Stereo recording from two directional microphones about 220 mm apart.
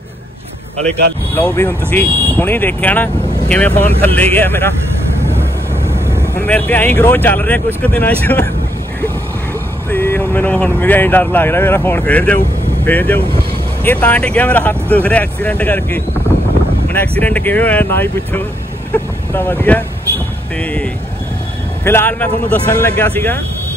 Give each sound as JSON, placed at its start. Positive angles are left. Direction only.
{"t": 1.3, "sound": "speech", "side_deg": 10}
{"t": 5.3, "sound": "vehicle", "side_deg": -10}
{"t": 6.3, "sound": "speech", "side_deg": 10}
{"t": 9.8, "sound": "speech", "side_deg": 10}
{"t": 17.2, "sound": "speech", "side_deg": 5}